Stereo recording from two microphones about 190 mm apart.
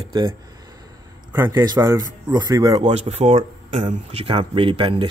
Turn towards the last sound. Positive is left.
turn(degrees=-25)  # may be behind; listen again after turning